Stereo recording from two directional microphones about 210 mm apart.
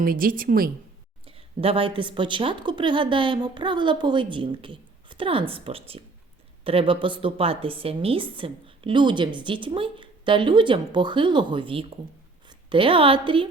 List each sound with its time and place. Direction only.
0.0 s a woman's voice: 45° right (ahead or behind)
1.2 s a woman's voice: 25° right (ahead or behind)